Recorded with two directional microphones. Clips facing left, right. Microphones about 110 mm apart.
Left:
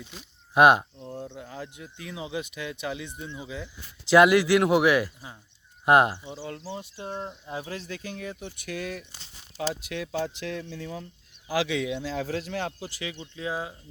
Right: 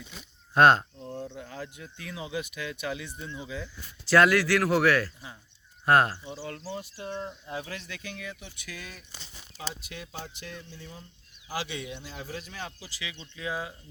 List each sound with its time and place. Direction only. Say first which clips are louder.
0.5 s speech: left 2 dB; 15° left (ahead or behind)
1.0 s chop: even; 10° left (ahead or behind)
1.5 s speech: left 1 dB; 15° left (ahead or behind); by 8.4 s 35° left (ahead or behind)
8.4 s speech: left 10 dB; 55° left (ahead or behind)
9.6 s speech: left 9 dB; 80° left; by 13.1 s 50° left (ahead or behind)
13.3 s speech: left 1 dB; 30° left (ahead or behind)